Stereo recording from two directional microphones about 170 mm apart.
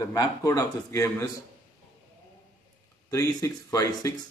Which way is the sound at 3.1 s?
20° left (ahead or behind).